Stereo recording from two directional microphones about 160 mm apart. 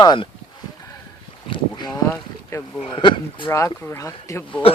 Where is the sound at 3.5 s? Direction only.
15° left (ahead or behind).